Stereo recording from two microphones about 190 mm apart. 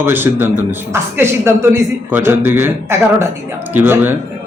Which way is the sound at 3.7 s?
10° right (ahead or behind).